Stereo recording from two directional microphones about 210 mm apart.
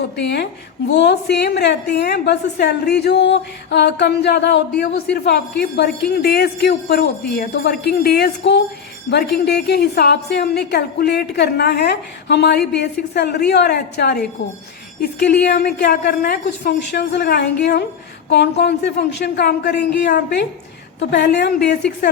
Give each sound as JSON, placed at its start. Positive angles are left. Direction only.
{"t": 0.2, "sound": "a woman's voice", "side_deg": 50}
{"t": 15.3, "sound": "a woman's voice", "side_deg": 50}